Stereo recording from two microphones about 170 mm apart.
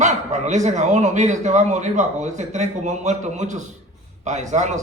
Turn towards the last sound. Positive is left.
turn(degrees=-45)  # may be behind; listen again after turning